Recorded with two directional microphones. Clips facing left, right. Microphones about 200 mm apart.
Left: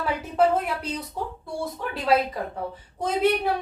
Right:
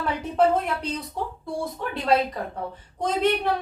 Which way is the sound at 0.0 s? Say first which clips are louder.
Even; 5° left (ahead or behind).